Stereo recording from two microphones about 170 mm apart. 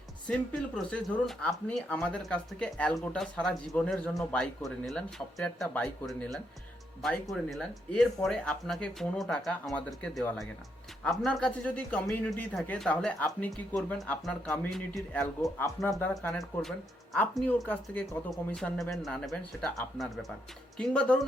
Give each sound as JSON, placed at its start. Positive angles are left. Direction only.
{"t": 0.3, "sound": "speech", "side_deg": 5}
{"t": 4.1, "sound": "speech", "side_deg": 15}
{"t": 4.4, "sound": "speech", "side_deg": 0}
{"t": 15.5, "sound": "speech", "side_deg": 15}
{"t": 16.4, "sound": "speech", "side_deg": 0}